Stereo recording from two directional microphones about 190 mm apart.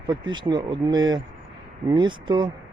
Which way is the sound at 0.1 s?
25° right (ahead or behind).